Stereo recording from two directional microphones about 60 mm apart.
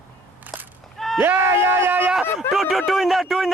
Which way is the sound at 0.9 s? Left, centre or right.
Centre.